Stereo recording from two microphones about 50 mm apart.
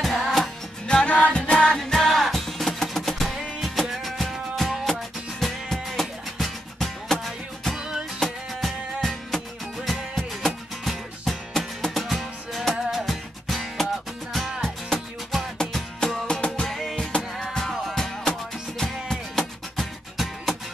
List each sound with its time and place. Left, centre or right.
0.0 s music: centre
0.8 s music: left
1.8 s music: centre
7.7 s music: centre
8.2 s music: centre
15.5 s music: centre
16.6 s music: centre
16.9 s music: left
17.6 s music: centre